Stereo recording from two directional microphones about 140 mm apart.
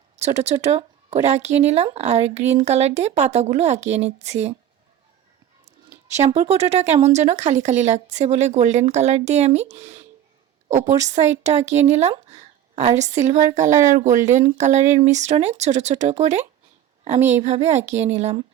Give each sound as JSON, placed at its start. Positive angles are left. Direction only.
{"t": 0.2, "sound": "speech", "side_deg": -50}
{"t": 6.1, "sound": "a woman's voice", "side_deg": -55}